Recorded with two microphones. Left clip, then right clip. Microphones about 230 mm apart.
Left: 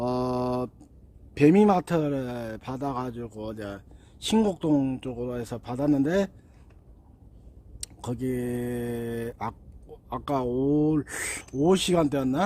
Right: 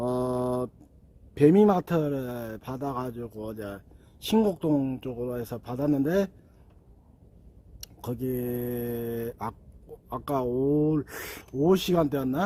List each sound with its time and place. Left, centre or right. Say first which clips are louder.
0.0 s a sound: left 1 dB; centre
1.3 s speech: even; centre
7.8 s speech: left 1 dB; centre